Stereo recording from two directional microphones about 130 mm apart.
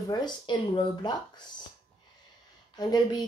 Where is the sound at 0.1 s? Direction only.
35° left (ahead or behind).